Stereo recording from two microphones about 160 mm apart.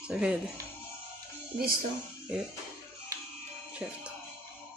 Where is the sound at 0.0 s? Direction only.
5° right (ahead or behind).